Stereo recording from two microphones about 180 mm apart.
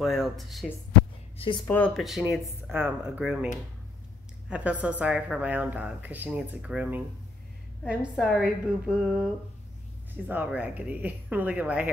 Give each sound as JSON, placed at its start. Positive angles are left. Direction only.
{"t": 0.0, "sound": "a woman's voice", "side_deg": 0}
{"t": 1.4, "sound": "speech", "side_deg": 30}
{"t": 2.0, "sound": "a woman's voice", "side_deg": 0}
{"t": 4.5, "sound": "a woman's voice", "side_deg": -10}